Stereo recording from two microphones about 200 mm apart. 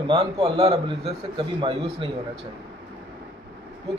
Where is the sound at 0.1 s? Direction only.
25° right (ahead or behind).